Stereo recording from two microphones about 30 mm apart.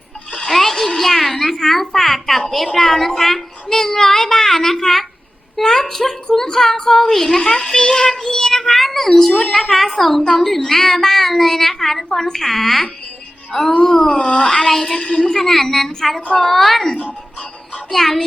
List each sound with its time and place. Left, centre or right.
0.5 s a sound: centre
2.7 s a child's voice: centre
14.1 s speech: left
14.4 s a child's voice: centre
15.3 s a child's voice: centre
17.9 s a woman's voice: centre